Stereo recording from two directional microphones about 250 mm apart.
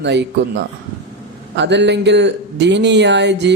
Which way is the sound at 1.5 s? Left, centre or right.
Right.